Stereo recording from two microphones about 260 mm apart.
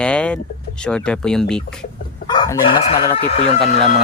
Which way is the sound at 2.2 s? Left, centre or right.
Centre.